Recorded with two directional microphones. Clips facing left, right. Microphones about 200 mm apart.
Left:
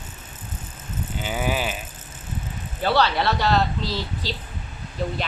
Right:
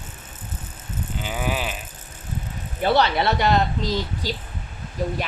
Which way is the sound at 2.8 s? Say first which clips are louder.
Right 1 dB; 20° right (ahead or behind).